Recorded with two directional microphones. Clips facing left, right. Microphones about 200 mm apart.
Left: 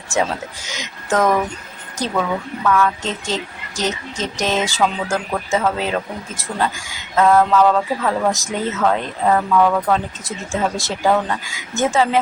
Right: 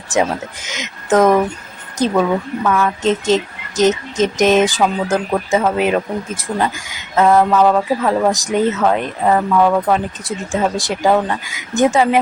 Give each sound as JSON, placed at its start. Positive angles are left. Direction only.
{"t": 0.1, "sound": "speech", "side_deg": -20}
{"t": 2.6, "sound": "speech", "side_deg": -20}